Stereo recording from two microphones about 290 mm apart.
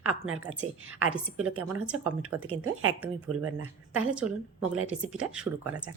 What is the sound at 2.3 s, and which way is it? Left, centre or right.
A woman's voice, right.